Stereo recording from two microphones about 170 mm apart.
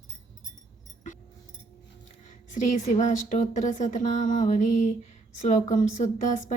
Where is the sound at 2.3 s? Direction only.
45° left (ahead or behind).